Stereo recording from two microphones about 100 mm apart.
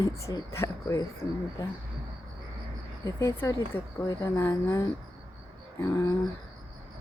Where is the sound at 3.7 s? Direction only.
65° left (ahead or behind).